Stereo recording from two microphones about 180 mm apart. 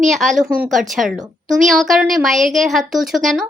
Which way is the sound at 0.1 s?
Centre (ahead or behind).